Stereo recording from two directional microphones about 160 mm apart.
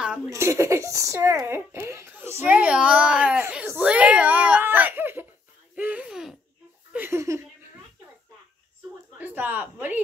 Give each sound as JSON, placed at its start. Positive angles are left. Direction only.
{"t": 0.3, "sound": "a child's voice", "side_deg": -20}
{"t": 5.8, "sound": "a sound", "side_deg": -10}
{"t": 6.9, "sound": "laughter", "side_deg": -15}
{"t": 9.2, "sound": "speech", "side_deg": -10}